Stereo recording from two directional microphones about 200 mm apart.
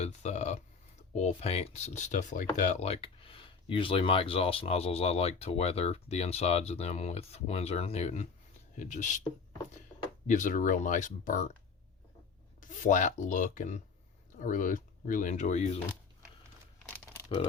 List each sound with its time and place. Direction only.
0.0 s a sound: 35° left (ahead or behind)
1.1 s speech: 35° left (ahead or behind)
10.2 s speech: 40° left (ahead or behind)
12.6 s speech: 40° left (ahead or behind)